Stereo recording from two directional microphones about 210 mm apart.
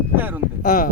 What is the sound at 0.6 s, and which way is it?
Speech, 40° left (ahead or behind).